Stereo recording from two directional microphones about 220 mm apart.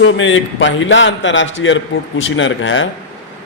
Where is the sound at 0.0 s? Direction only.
60° left (ahead or behind).